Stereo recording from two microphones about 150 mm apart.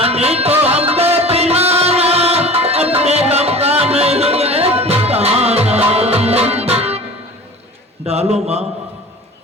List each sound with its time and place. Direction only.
0.0 s music: 45° right (ahead or behind)
8.0 s a man's voice: 45° right (ahead or behind)